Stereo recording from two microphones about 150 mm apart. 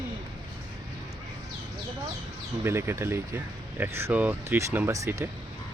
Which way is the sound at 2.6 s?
15° right (ahead or behind).